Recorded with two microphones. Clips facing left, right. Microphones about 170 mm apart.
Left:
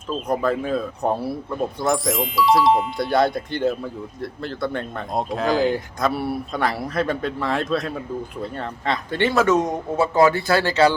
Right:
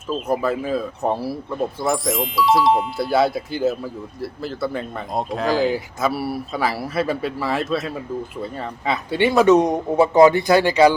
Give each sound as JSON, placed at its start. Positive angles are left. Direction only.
{"t": 0.1, "sound": "speech", "side_deg": -5}